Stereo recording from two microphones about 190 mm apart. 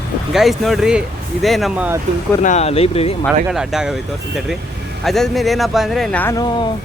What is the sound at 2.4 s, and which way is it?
Speech, 35° left (ahead or behind).